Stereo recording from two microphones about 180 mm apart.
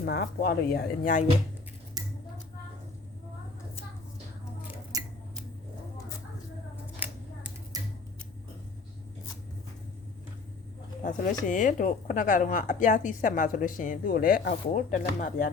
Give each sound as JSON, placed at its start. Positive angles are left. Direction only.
{"t": 0.0, "sound": "speech", "side_deg": 65}
{"t": 4.9, "sound": "scissors", "side_deg": -20}
{"t": 11.0, "sound": "speech", "side_deg": 45}